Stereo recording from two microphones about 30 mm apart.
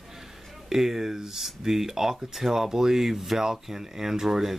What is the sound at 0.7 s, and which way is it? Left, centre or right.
Speech, centre.